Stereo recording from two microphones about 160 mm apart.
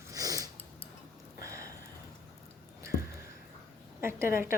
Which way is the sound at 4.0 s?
15° right (ahead or behind).